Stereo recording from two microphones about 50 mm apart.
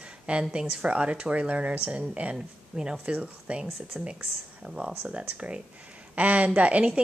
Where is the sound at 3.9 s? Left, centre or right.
Centre.